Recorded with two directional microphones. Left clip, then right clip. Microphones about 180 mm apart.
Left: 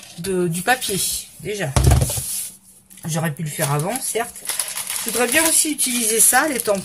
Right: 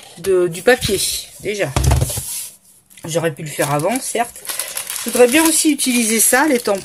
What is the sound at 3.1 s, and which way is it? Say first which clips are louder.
Speech: right 7 dB; 40° right (ahead or behind).